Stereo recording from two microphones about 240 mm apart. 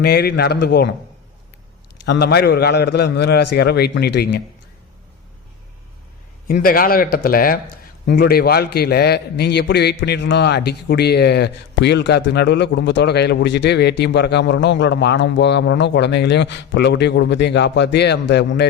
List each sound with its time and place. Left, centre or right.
0.0 s a man's voice: left
2.0 s a man's voice: left
6.5 s a man's voice: left